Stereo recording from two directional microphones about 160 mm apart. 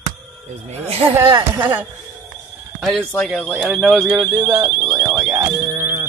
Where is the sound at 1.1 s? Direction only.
20° right (ahead or behind).